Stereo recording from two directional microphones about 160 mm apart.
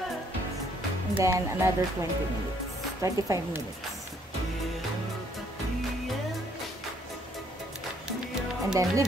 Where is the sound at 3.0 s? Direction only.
20° right (ahead or behind).